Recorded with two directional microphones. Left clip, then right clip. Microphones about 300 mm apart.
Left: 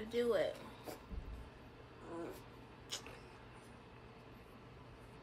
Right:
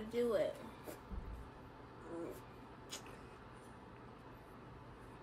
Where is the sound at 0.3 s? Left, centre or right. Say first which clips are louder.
Left 1 dB; centre.